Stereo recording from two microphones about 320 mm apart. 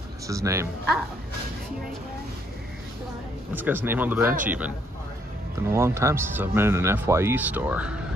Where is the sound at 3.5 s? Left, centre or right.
Centre.